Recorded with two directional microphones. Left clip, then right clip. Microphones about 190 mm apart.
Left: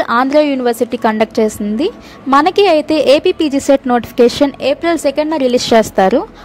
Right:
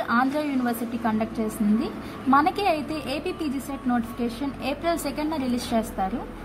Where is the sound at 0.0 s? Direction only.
45° left (ahead or behind).